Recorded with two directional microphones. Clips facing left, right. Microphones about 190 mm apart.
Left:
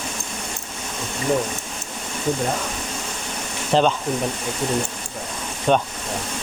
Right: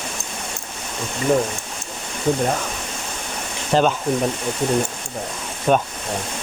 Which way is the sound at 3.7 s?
Centre (ahead or behind).